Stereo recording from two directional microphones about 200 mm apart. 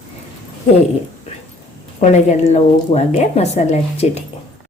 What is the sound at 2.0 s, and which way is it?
A woman's voice, 35° left (ahead or behind).